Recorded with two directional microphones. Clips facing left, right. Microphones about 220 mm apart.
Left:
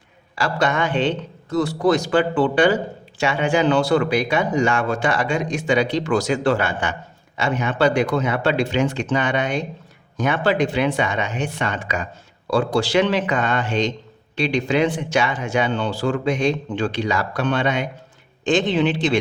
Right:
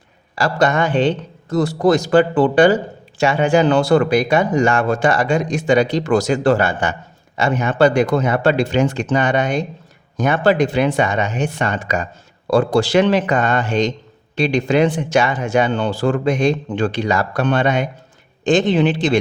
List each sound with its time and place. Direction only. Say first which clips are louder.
0.3 s speech: right 4 dB; 40° right (ahead or behind)